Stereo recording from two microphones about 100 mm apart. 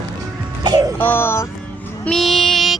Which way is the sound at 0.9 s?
20° left (ahead or behind).